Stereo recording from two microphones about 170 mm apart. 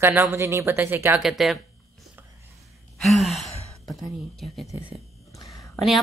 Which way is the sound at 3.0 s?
Centre (ahead or behind).